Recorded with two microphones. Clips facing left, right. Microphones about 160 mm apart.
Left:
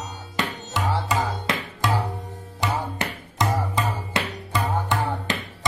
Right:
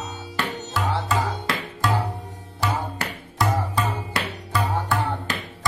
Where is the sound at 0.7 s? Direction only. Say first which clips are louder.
Even; 20° left (ahead or behind).